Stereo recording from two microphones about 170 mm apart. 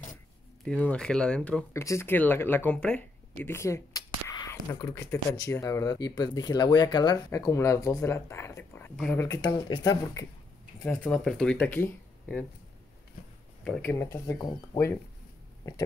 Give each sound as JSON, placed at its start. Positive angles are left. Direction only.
{"t": 0.7, "sound": "speech", "side_deg": 5}
{"t": 1.7, "sound": "speech", "side_deg": 15}
{"t": 10.8, "sound": "speech", "side_deg": 5}
{"t": 13.7, "sound": "speech", "side_deg": 10}